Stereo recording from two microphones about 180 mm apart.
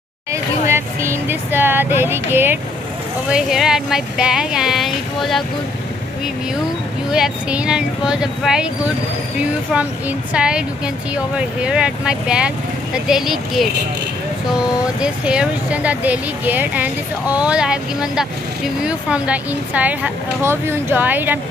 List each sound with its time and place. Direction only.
0.3 s vehicle: 15° right (ahead or behind)
3.3 s speech: 5° right (ahead or behind)
7.1 s speech: 5° right (ahead or behind)
15.0 s speech: 5° right (ahead or behind)